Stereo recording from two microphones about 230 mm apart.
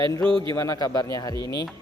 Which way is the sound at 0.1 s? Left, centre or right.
Centre.